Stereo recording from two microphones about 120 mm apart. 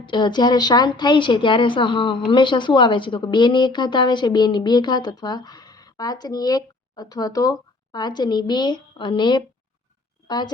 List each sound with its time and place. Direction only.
0.0 s a woman's voice: 40° left (ahead or behind)